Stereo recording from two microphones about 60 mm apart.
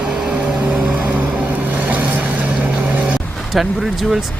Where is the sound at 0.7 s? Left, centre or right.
Right.